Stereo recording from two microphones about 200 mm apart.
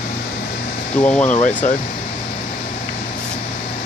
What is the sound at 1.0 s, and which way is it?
Speech, 10° left (ahead or behind).